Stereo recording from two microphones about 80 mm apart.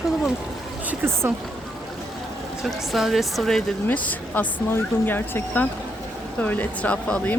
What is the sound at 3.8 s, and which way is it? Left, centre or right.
Speech, centre.